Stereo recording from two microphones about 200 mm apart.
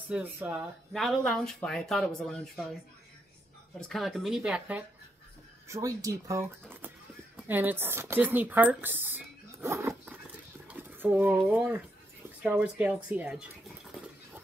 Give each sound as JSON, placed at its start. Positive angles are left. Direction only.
{"t": 0.1, "sound": "speech", "side_deg": -10}
{"t": 0.9, "sound": "speech", "side_deg": 0}
{"t": 3.9, "sound": "speech", "side_deg": 0}